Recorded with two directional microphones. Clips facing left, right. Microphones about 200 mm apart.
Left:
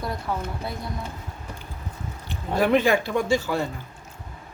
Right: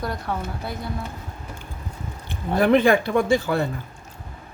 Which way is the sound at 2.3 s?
55° right (ahead or behind).